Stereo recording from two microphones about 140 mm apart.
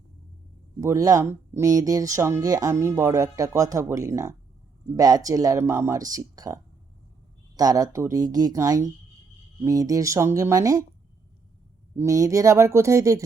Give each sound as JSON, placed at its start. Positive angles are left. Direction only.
{"t": 0.8, "sound": "speech", "side_deg": -25}
{"t": 11.9, "sound": "speech", "side_deg": -20}